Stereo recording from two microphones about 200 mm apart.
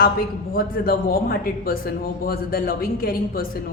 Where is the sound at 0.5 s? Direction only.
45° left (ahead or behind).